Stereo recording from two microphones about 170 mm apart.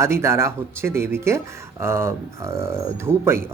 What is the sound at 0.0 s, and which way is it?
Speech, 15° right (ahead or behind).